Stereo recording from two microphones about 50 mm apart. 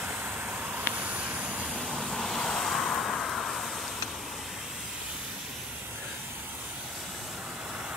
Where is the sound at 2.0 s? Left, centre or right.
Centre.